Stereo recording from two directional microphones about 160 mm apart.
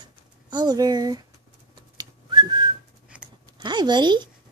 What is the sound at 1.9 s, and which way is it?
Whistling, 25° right (ahead or behind).